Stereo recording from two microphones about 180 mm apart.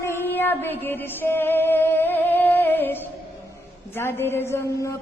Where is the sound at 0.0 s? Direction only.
10° left (ahead or behind).